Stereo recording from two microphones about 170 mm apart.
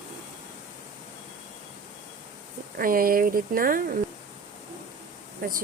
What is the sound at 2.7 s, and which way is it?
A woman's voice, 55° right (ahead or behind).